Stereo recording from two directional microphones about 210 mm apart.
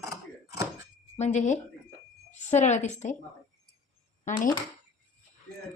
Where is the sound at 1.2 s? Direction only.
35° left (ahead or behind).